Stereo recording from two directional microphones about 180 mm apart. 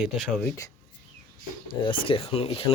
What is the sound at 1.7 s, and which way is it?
Speech, 30° left (ahead or behind).